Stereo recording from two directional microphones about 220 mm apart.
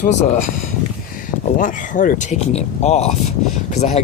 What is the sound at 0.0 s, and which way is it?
Speech, 30° left (ahead or behind).